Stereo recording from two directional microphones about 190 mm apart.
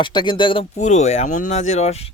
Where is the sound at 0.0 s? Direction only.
25° left (ahead or behind).